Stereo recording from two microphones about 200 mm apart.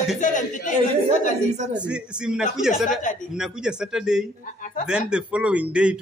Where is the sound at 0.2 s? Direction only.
40° left (ahead or behind).